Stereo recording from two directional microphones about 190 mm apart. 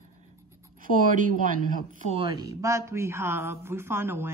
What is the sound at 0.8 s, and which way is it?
Speech, 45° right (ahead or behind).